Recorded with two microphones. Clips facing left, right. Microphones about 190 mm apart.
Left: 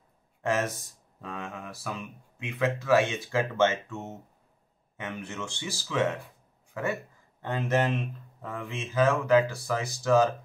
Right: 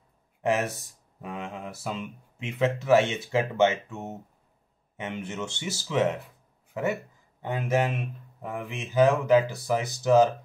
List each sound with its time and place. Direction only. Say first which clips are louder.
0.4 s speech: right 2 dB; 15° right (ahead or behind)